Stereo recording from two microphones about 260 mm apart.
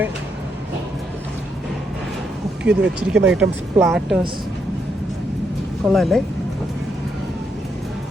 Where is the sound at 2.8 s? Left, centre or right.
Right.